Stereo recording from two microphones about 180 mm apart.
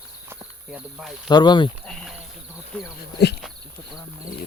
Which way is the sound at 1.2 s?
25° left (ahead or behind).